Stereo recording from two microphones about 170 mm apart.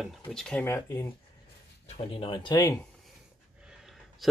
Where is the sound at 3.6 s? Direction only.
5° right (ahead or behind).